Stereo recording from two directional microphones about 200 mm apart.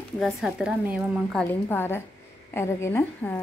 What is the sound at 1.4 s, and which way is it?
Speech, 10° left (ahead or behind).